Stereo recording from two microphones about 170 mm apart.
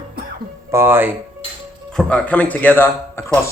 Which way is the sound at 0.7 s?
15° right (ahead or behind).